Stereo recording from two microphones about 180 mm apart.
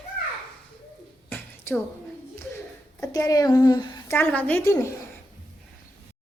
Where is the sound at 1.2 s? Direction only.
10° left (ahead or behind).